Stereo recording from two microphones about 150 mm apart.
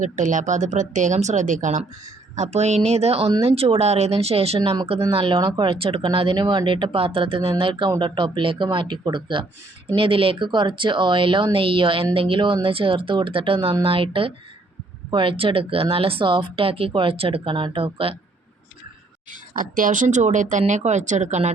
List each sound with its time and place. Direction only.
0.0 s speech: 55° right (ahead or behind); by 18.2 s 40° right (ahead or behind)
19.3 s speech: 65° right (ahead or behind)